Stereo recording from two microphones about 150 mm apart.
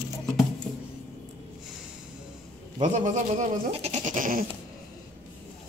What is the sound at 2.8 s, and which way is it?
Goat, 55° right (ahead or behind).